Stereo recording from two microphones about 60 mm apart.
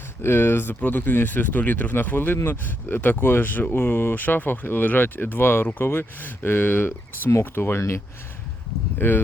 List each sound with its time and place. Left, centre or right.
0.2 s speech: left
9.0 s speech: left